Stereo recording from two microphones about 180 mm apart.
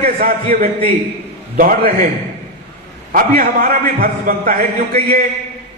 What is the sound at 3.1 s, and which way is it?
A man's voice, 50° right (ahead or behind).